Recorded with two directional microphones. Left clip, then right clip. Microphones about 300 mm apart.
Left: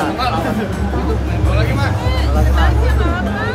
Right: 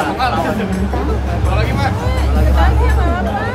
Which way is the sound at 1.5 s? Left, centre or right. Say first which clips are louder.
Right 1 dB; centre.